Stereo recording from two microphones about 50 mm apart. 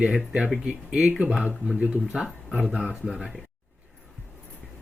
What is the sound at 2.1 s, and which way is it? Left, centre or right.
Speech, centre.